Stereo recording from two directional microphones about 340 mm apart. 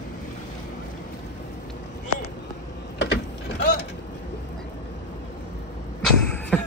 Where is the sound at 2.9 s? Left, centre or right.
Left.